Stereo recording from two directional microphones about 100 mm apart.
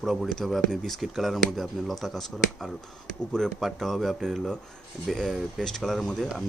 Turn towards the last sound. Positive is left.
turn(degrees=5)  # may be behind; listen again after turning